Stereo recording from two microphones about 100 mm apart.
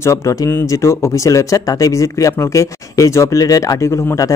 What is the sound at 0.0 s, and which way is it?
Speech, 30° left (ahead or behind).